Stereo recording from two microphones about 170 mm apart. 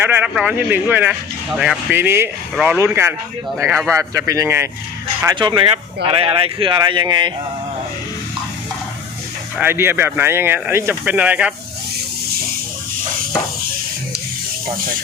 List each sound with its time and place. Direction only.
0.0 s speech: 10° right (ahead or behind)
5.2 s speech: 25° right (ahead or behind)
9.6 s speech: 15° right (ahead or behind)